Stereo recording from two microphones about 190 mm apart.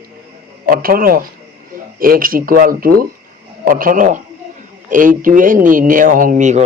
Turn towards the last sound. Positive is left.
turn(degrees=-40)  # may be behind; listen again after turning